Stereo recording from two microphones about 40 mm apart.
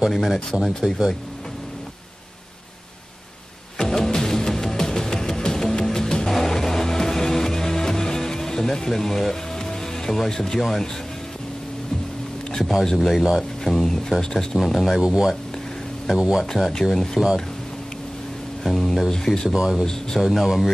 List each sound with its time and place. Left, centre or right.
0.1 s speech: centre
3.7 s music: centre
12.9 s speech: centre
13.4 s a sound: centre
14.3 s speech: centre
15.0 s speech: centre
16.9 s speech: centre
18.6 s speech: centre
19.0 s speech: centre
19.5 s speech: centre
19.8 s speech: centre
20.2 s speech: centre